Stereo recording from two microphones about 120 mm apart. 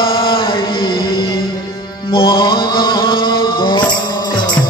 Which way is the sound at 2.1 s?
45° left (ahead or behind).